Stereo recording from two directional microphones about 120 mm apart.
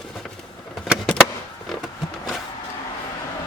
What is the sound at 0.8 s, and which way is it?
Vehicle, centre (ahead or behind).